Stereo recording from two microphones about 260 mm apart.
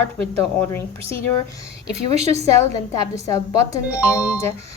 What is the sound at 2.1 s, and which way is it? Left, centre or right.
Speech, right.